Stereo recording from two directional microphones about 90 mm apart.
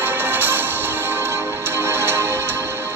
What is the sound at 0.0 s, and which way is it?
Music, 25° right (ahead or behind).